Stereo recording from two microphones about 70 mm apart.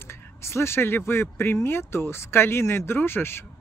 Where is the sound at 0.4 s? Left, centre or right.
Left.